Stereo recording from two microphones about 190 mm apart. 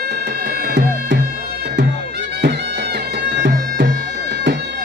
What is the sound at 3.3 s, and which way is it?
Bagpipes, 65° right (ahead or behind).